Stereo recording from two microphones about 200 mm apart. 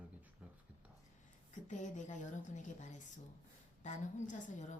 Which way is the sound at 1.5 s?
40° left (ahead or behind).